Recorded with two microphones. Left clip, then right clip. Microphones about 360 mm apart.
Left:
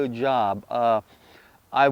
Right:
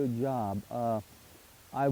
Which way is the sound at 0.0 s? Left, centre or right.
Centre.